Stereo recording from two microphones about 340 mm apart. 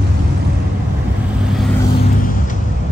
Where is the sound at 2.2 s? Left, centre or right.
Left.